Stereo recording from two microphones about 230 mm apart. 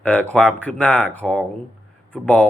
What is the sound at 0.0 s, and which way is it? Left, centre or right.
Speech, centre.